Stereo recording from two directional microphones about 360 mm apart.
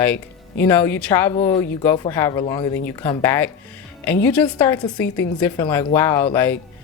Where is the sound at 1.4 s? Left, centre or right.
Centre.